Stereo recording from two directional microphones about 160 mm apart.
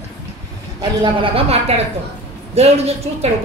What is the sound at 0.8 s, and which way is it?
A woman's voice, 35° right (ahead or behind).